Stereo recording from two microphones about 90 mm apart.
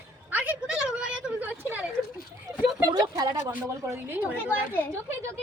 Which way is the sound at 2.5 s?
40° right (ahead or behind).